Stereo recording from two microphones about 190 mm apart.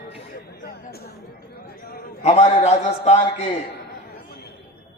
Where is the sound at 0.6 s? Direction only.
55° left (ahead or behind).